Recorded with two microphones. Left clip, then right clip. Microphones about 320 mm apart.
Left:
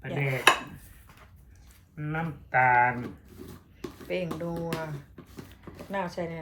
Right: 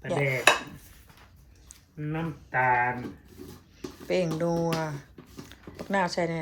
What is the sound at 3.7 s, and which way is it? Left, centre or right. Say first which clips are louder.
Music: right 5 dB; centre.